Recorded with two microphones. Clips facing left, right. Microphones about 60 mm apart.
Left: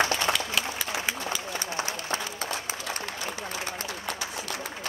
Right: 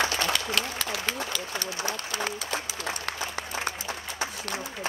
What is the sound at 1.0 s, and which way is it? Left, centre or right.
Run, centre.